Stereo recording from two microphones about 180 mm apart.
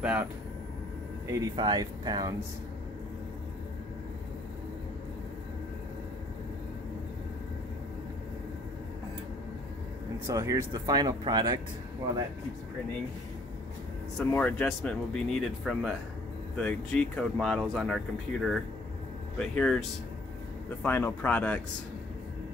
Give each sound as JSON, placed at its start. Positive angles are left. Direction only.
{"t": 0.0, "sound": "speech", "side_deg": -10}
{"t": 10.2, "sound": "speech", "side_deg": -15}
{"t": 14.1, "sound": "speech", "side_deg": 5}